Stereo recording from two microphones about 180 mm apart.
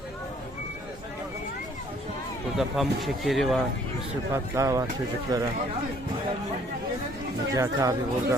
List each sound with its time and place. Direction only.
2.8 s speech: 5° right (ahead or behind)
4.5 s speech: 15° right (ahead or behind)
7.5 s speech: 20° right (ahead or behind)